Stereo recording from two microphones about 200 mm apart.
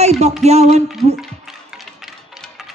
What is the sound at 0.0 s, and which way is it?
Music, 30° right (ahead or behind).